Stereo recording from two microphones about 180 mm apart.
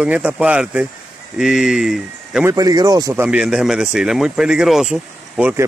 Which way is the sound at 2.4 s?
20° right (ahead or behind).